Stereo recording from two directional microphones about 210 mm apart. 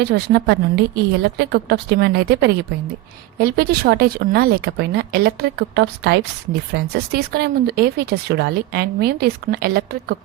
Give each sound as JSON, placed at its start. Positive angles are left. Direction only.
{"t": 0.0, "sound": "speech", "side_deg": -50}